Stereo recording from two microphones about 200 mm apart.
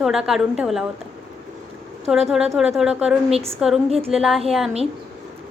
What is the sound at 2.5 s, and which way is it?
A woman's voice, centre (ahead or behind).